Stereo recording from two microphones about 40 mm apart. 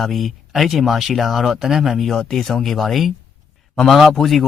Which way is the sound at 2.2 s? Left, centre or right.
Centre.